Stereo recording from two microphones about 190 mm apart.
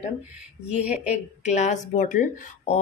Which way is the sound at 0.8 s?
5° right (ahead or behind).